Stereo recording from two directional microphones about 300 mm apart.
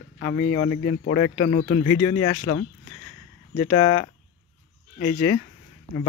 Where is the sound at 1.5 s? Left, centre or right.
Left.